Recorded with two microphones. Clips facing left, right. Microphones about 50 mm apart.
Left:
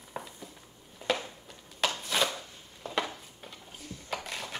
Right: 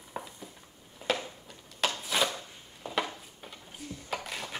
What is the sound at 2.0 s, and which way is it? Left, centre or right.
Chopping, centre.